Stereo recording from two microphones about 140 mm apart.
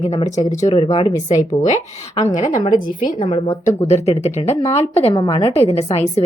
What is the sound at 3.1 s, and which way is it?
Speech, 40° left (ahead or behind).